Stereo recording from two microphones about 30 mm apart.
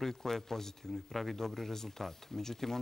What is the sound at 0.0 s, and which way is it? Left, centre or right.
Speech, centre.